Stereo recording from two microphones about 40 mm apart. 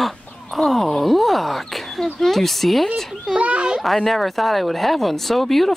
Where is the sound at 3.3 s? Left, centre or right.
Right.